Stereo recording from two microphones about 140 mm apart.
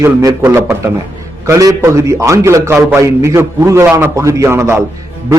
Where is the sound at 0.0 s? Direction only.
20° right (ahead or behind).